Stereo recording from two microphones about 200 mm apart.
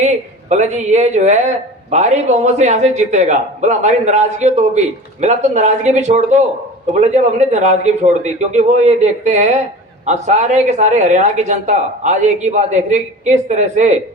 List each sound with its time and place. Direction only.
0.0 s speech: 35° right (ahead or behind)